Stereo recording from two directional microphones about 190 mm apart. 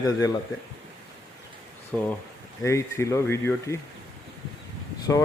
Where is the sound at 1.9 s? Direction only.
5° left (ahead or behind).